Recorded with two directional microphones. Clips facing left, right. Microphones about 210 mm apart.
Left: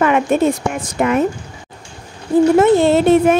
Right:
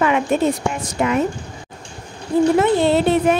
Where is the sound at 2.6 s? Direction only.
50° left (ahead or behind).